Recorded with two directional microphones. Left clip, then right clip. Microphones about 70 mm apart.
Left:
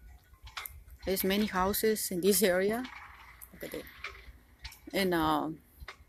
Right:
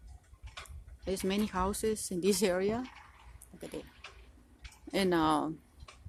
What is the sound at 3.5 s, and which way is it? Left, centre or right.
Goat, right.